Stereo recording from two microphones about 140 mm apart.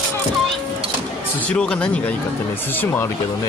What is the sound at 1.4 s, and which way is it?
Speech, 5° left (ahead or behind).